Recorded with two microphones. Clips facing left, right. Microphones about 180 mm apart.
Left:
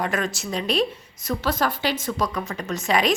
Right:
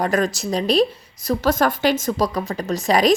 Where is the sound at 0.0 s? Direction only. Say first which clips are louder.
Right 6 dB; 40° right (ahead or behind).